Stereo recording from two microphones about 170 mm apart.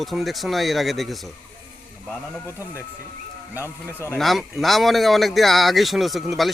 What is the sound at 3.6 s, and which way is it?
Speech, 15° left (ahead or behind).